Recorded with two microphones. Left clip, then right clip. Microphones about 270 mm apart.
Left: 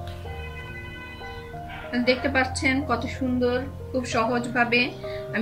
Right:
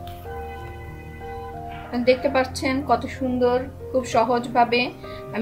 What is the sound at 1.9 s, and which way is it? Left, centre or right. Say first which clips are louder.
Speech: right 4 dB; centre.